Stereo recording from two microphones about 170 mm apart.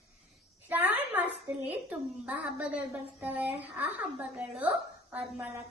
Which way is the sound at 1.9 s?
10° right (ahead or behind).